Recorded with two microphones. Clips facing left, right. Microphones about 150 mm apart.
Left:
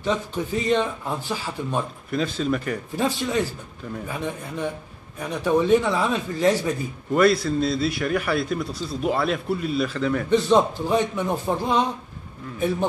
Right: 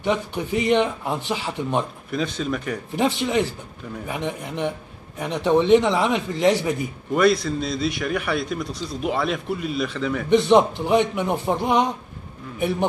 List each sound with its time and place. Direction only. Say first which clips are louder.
0.0 s speech: right 1 dB; 15° right (ahead or behind)
2.0 s a man's voice: left 1 dB; centre (ahead or behind)
3.0 s a man's voice: right 3 dB; 20° right (ahead or behind)
7.2 s a man's voice: even; centre (ahead or behind)
10.3 s a man's voice: right 3 dB; 15° right (ahead or behind)